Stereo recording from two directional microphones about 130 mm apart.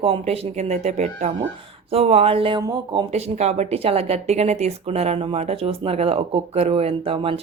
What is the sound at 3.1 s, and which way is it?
Speech, 55° right (ahead or behind).